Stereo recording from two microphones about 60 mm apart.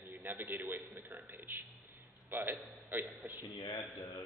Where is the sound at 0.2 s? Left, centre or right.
Right.